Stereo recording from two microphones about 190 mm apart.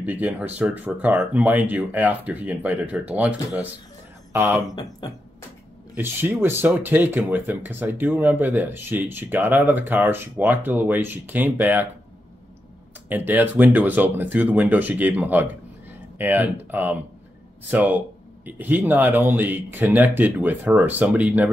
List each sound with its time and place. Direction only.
0.0 s speech: 10° right (ahead or behind)
5.0 s music: 20° left (ahead or behind)
5.9 s speech: 10° right (ahead or behind)
13.1 s speech: 10° right (ahead or behind)